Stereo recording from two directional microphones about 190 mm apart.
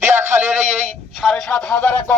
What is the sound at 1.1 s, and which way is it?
Speech, centre (ahead or behind).